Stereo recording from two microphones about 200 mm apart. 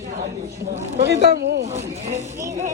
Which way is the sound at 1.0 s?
55° right (ahead or behind).